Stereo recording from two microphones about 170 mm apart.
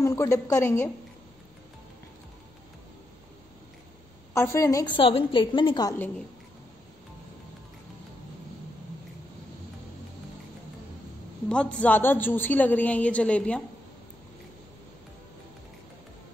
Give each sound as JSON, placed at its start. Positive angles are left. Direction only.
{"t": 0.0, "sound": "a woman's voice", "side_deg": 15}
{"t": 4.3, "sound": "a woman's voice", "side_deg": 15}
{"t": 5.0, "sound": "a woman's voice", "side_deg": 30}
{"t": 11.4, "sound": "a woman's voice", "side_deg": 5}